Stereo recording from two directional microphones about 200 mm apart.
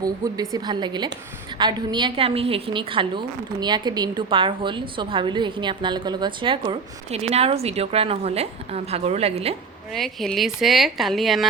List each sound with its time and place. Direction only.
0.0 s a woman's voice: 20° right (ahead or behind)
9.9 s a woman's voice: centre (ahead or behind)